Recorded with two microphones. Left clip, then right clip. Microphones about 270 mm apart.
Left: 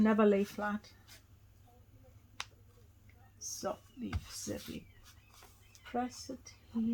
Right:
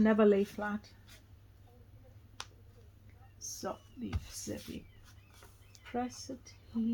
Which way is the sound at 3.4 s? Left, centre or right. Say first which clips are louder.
Left 1 dB; centre.